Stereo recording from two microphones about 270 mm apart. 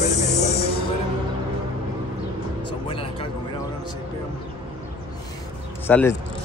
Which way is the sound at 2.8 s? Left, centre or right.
Centre.